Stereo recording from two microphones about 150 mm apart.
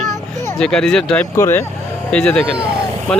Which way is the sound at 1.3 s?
15° left (ahead or behind).